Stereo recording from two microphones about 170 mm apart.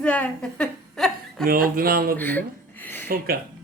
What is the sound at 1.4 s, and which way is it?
Speech, 60° right (ahead or behind).